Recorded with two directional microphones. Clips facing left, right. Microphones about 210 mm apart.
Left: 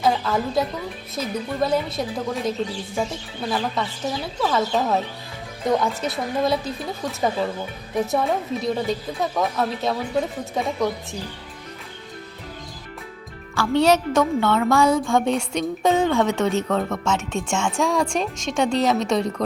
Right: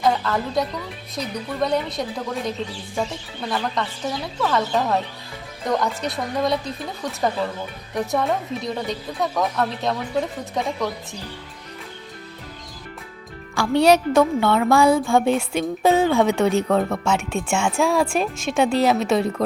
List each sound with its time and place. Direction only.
0.0 s a woman's voice: centre (ahead or behind)
13.6 s a woman's voice: 10° right (ahead or behind)